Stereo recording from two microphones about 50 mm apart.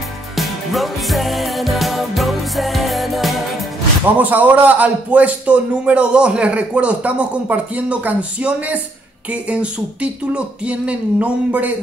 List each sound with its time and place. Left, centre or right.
0.4 s music: centre
4.0 s a man's voice: right